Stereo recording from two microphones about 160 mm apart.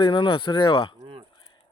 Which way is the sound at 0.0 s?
30° left (ahead or behind).